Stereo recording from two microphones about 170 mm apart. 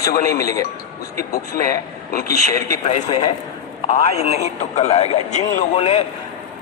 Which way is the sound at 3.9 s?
40° left (ahead or behind).